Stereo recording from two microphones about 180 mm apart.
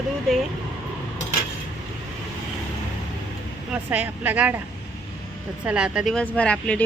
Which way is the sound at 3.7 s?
10° right (ahead or behind).